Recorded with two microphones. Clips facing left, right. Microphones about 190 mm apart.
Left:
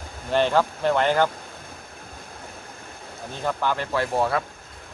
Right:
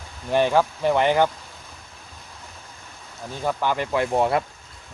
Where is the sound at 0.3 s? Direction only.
10° right (ahead or behind).